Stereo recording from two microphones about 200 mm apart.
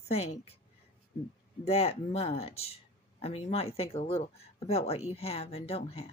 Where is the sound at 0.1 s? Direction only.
30° left (ahead or behind).